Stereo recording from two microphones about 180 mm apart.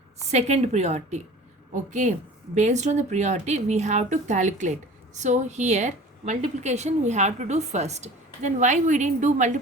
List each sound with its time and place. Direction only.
0.3 s a woman's voice: 40° right (ahead or behind)